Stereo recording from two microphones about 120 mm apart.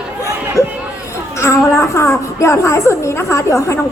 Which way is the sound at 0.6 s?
25° left (ahead or behind).